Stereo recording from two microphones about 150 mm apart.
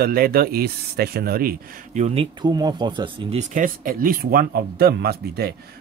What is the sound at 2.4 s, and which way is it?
Speech, 30° right (ahead or behind).